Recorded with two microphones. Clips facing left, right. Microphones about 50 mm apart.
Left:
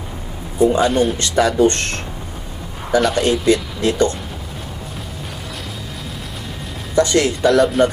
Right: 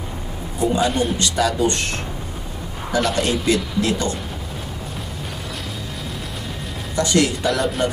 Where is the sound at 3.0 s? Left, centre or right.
Centre.